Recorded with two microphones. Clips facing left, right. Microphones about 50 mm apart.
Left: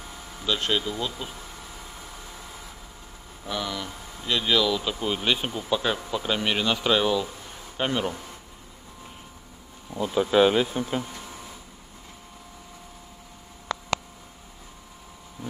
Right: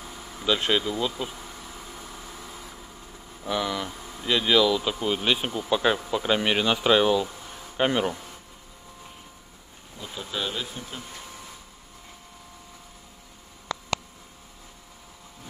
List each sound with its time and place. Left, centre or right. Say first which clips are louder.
0.0 s vehicle: right 1 dB; centre
0.5 s speech: right 2 dB; centre
0.8 s bee: right 3 dB; centre
3.4 s speech: right 3 dB; centre
8.1 s a sound: right 1 dB; centre
10.0 s speech: left 13 dB; left